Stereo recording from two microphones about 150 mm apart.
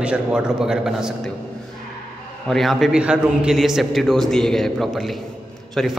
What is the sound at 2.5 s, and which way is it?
A man's voice, centre (ahead or behind).